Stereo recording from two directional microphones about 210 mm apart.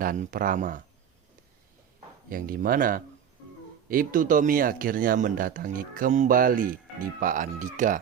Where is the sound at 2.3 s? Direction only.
40° right (ahead or behind).